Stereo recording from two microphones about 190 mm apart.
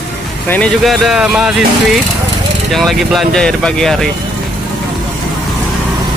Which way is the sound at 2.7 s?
Centre (ahead or behind).